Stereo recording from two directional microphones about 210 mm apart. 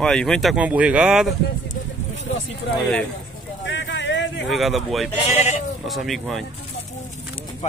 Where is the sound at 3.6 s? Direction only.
60° left (ahead or behind).